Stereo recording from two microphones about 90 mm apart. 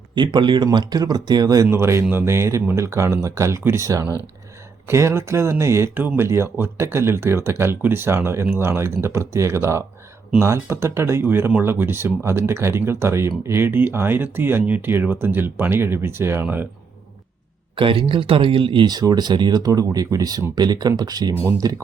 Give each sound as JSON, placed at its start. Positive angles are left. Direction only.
{"t": 0.1, "sound": "speech", "side_deg": -60}
{"t": 1.6, "sound": "speech", "side_deg": -30}
{"t": 4.9, "sound": "speech", "side_deg": -30}
{"t": 17.7, "sound": "speech", "side_deg": -70}
{"t": 18.9, "sound": "speech", "side_deg": -50}